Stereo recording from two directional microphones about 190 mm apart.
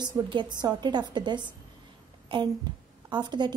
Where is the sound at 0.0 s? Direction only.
25° right (ahead or behind).